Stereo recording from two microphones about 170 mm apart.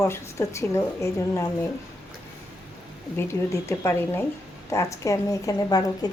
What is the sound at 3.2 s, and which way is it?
A woman's voice, 15° left (ahead or behind).